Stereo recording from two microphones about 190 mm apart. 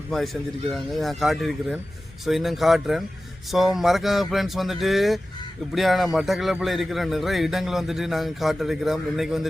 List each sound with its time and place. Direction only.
0.7 s a man's voice: centre (ahead or behind)